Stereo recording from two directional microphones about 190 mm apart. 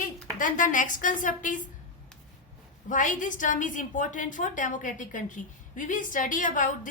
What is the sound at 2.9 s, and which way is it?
A woman's voice, 40° left (ahead or behind).